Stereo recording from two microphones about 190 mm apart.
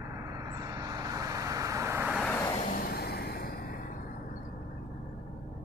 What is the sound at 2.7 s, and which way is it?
Vehicle, 55° left (ahead or behind).